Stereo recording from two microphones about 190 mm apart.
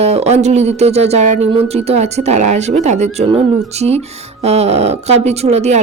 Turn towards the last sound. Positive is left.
turn(degrees=-35)  # may be behind; listen again after turning